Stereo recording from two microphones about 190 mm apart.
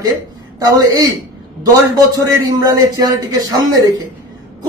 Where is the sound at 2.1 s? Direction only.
20° right (ahead or behind).